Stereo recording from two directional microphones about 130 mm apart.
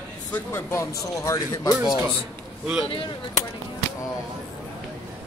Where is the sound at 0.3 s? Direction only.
20° left (ahead or behind).